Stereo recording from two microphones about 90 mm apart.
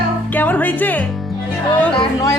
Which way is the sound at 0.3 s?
20° left (ahead or behind).